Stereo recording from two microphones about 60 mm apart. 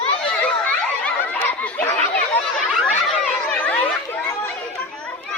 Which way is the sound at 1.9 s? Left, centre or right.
Centre.